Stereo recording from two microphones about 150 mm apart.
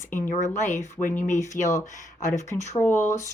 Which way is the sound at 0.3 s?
55° left (ahead or behind).